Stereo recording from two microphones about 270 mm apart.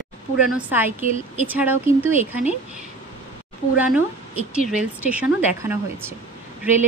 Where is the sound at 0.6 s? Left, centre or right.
Centre.